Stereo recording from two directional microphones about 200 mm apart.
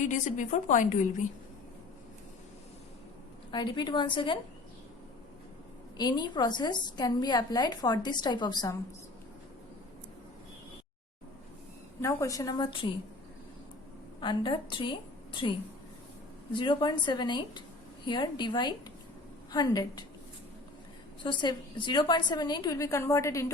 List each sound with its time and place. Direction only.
0.0 s a woman's voice: 40° left (ahead or behind)
3.5 s a woman's voice: 20° left (ahead or behind)
6.0 s a woman's voice: 20° left (ahead or behind)
12.0 s a woman's voice: 15° left (ahead or behind)
14.2 s a woman's voice: 20° left (ahead or behind)
16.6 s a woman's voice: 25° left (ahead or behind)
21.2 s a woman's voice: 25° left (ahead or behind)